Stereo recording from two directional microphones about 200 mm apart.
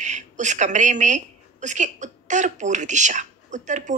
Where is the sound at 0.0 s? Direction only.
35° right (ahead or behind).